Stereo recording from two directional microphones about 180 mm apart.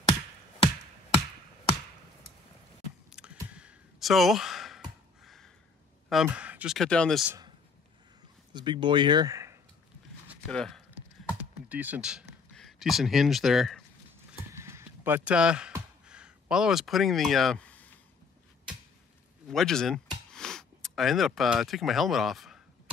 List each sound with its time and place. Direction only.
3.1 s a sound: 5° right (ahead or behind)
6.0 s speech: 5° right (ahead or behind)
8.5 s speech: 25° right (ahead or behind)
10.4 s speech: 5° left (ahead or behind)
11.7 s speech: 10° right (ahead or behind)
14.5 s clip-clop: 15° right (ahead or behind)
16.1 s speech: 5° right (ahead or behind)
19.4 s speech: centre (ahead or behind)